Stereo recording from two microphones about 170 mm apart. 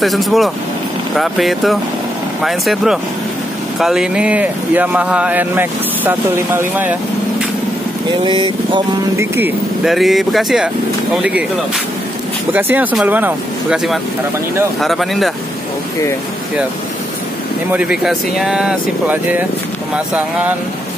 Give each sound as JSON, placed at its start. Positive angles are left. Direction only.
{"t": 0.0, "sound": "speech", "side_deg": 0}
{"t": 8.1, "sound": "speech", "side_deg": -30}
{"t": 9.2, "sound": "speech", "side_deg": -15}
{"t": 9.8, "sound": "speech", "side_deg": 0}
{"t": 12.5, "sound": "speech", "side_deg": -10}
{"t": 17.6, "sound": "speech", "side_deg": -5}